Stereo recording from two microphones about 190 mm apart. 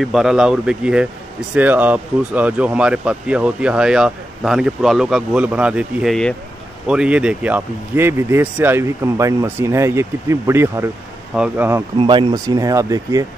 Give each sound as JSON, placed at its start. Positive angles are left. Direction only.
{"t": 0.0, "sound": "speech", "side_deg": 0}
{"t": 12.0, "sound": "speech", "side_deg": -25}